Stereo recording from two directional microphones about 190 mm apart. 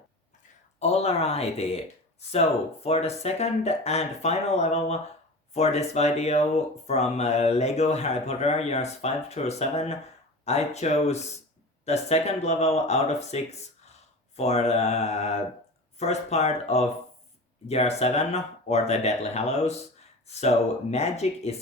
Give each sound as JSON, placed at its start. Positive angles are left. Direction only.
{"t": 0.8, "sound": "speech", "side_deg": 35}
{"t": 2.8, "sound": "speech", "side_deg": 35}
{"t": 20.9, "sound": "speech", "side_deg": 35}